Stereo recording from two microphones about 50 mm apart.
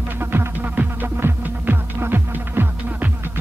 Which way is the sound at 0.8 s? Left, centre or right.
Right.